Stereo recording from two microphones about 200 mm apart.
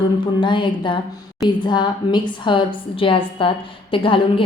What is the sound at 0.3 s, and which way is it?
A woman's voice, 25° left (ahead or behind).